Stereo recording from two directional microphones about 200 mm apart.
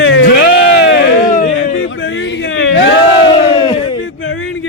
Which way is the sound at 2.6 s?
70° left (ahead or behind).